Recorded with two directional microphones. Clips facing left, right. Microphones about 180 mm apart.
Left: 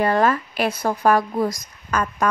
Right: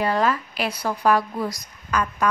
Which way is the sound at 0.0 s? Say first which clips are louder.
Left 3 dB; 50° left (ahead or behind).